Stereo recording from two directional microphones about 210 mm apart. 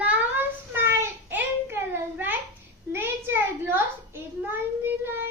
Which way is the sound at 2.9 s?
10° right (ahead or behind).